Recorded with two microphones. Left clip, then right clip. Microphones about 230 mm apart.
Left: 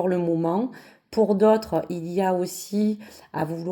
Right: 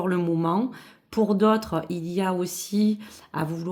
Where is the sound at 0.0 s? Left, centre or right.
Centre.